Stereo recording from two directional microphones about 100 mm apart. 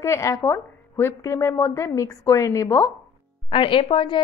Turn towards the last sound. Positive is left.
turn(degrees=55)  # may be behind; listen again after turning